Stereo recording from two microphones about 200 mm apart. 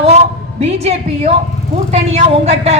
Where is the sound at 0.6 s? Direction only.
35° right (ahead or behind).